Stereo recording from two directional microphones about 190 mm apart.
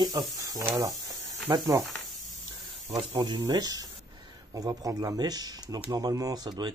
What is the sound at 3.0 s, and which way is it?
Speech, 30° right (ahead or behind).